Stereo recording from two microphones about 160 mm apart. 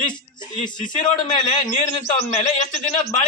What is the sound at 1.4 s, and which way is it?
A man's voice, 45° left (ahead or behind).